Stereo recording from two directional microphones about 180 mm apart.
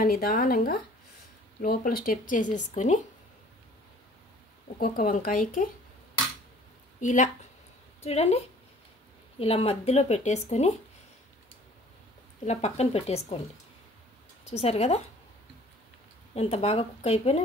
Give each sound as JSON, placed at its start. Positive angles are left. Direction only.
{"t": 0.0, "sound": "speech", "side_deg": 55}
{"t": 4.7, "sound": "speech", "side_deg": 55}
{"t": 7.0, "sound": "speech", "side_deg": 45}
{"t": 12.4, "sound": "speech", "side_deg": 35}
{"t": 14.4, "sound": "speech", "side_deg": 35}
{"t": 16.3, "sound": "speech", "side_deg": 35}